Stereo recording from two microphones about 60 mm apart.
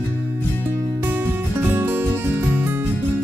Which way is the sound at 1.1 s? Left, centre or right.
Right.